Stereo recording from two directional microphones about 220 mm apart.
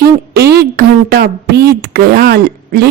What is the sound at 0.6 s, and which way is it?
Speech, 45° right (ahead or behind).